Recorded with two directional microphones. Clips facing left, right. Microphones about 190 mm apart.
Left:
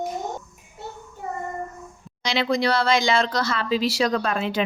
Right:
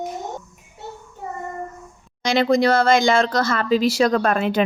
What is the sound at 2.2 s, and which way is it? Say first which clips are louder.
A woman's voice: right 5 dB; 45° right (ahead or behind).